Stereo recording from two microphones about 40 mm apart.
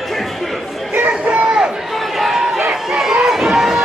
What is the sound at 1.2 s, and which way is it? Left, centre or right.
Crowd, right.